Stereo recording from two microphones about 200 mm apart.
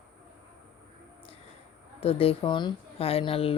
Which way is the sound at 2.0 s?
30° left (ahead or behind).